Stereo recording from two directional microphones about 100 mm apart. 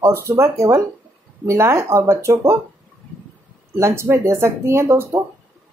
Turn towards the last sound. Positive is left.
turn(degrees=-25)  # may be behind; listen again after turning